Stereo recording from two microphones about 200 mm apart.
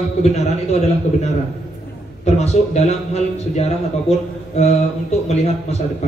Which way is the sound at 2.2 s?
35° left (ahead or behind).